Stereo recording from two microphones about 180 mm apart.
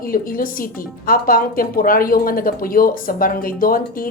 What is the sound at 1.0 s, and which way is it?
A woman's voice, 55° left (ahead or behind).